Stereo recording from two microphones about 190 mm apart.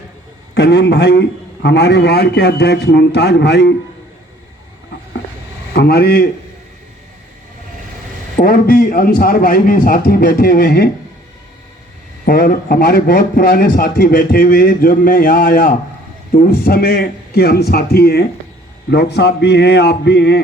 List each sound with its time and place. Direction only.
0.5 s a man's voice: 60° left (ahead or behind)
5.7 s a man's voice: 55° left (ahead or behind)
8.4 s a man's voice: 50° left (ahead or behind)
12.2 s a man's voice: 50° left (ahead or behind)